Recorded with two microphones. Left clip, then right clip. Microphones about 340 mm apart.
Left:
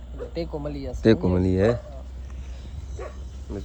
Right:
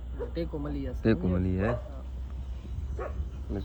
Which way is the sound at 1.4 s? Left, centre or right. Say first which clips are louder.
Left 9 dB; centre.